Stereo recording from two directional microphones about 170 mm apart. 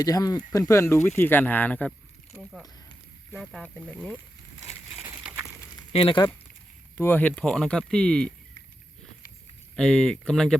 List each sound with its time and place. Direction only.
0.0 s speech: 20° left (ahead or behind)
2.3 s a sound: centre (ahead or behind)
3.3 s speech: centre (ahead or behind)
5.9 s speech: 30° left (ahead or behind)
6.9 s speech: 10° left (ahead or behind)
9.7 s speech: 5° left (ahead or behind)